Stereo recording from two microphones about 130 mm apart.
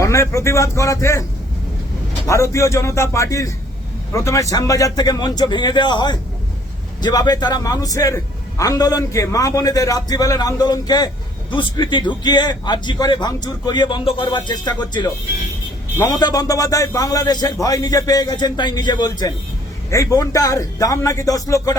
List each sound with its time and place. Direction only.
0.0 s a man's voice: 25° left (ahead or behind)
2.2 s a man's voice: 25° left (ahead or behind)